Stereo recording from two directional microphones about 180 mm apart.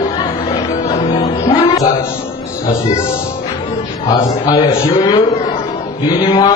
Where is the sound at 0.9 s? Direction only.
20° left (ahead or behind).